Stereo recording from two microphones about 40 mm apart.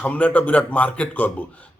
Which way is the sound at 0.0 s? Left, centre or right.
Left.